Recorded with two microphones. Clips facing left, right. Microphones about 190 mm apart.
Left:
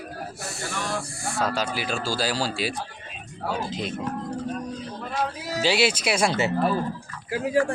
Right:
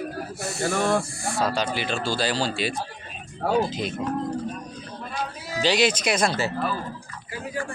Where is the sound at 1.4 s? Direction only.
5° left (ahead or behind).